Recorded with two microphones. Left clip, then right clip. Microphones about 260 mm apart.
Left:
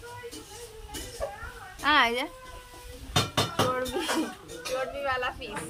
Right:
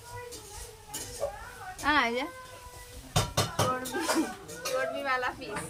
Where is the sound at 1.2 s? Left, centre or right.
Right.